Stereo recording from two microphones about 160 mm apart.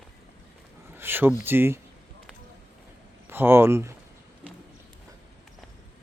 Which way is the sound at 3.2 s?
15° right (ahead or behind).